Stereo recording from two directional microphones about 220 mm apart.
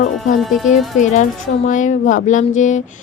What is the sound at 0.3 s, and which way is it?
Speech, centre (ahead or behind).